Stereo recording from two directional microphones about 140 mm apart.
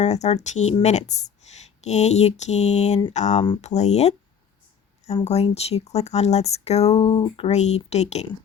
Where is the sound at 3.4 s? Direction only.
40° left (ahead or behind).